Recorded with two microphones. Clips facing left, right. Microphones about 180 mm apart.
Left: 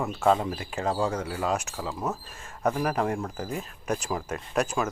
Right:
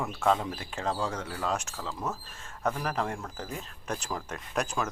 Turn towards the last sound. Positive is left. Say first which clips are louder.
# left 4 dB
turn(degrees=5)  # may be behind; listen again after turning